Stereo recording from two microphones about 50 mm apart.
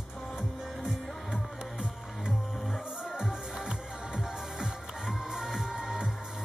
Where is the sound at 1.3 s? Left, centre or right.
Centre.